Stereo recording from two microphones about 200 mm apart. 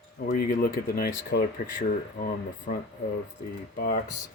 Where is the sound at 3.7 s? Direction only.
45° left (ahead or behind).